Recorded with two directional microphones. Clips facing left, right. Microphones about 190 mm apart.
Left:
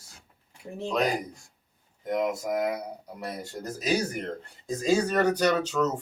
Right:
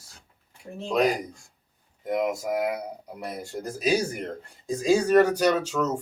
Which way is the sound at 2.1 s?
10° right (ahead or behind).